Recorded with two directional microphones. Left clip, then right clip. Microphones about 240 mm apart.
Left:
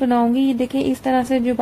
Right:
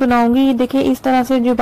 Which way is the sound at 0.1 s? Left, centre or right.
Centre.